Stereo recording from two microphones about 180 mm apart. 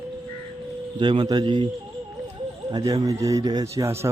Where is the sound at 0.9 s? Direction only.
25° right (ahead or behind).